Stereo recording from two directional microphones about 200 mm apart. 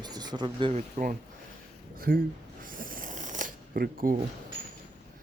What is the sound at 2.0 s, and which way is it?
Snoring, 45° right (ahead or behind).